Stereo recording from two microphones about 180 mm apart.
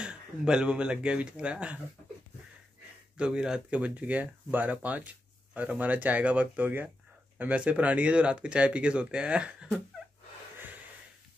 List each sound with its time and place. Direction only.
0.0 s speech: 5° right (ahead or behind)
3.2 s speech: 5° right (ahead or behind)